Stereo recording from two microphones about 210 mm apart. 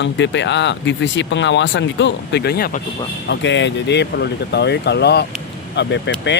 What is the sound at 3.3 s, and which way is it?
Speech, 60° left (ahead or behind).